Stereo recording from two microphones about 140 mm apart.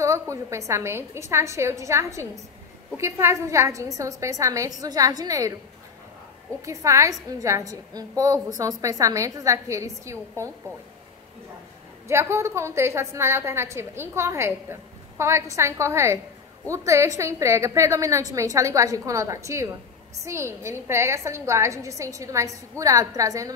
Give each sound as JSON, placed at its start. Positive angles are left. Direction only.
{"t": 0.0, "sound": "a woman's voice", "side_deg": -20}
{"t": 6.6, "sound": "a woman's voice", "side_deg": -20}
{"t": 12.1, "sound": "a woman's voice", "side_deg": -20}